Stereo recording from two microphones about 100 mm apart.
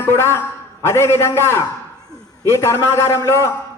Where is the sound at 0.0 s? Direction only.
25° left (ahead or behind).